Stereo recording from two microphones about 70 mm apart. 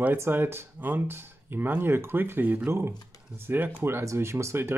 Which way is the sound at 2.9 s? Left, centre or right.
Left.